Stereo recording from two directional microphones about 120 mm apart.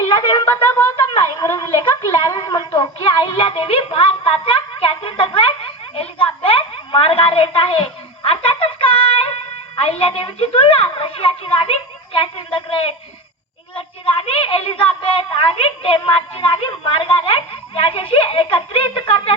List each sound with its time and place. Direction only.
0.1 s speech: 45° left (ahead or behind)
0.5 s a sound: 20° left (ahead or behind)
0.9 s speech: 35° left (ahead or behind)
1.5 s a sound: 25° left (ahead or behind)
2.2 s music: 35° left (ahead or behind)
9.7 s speech: 55° left (ahead or behind)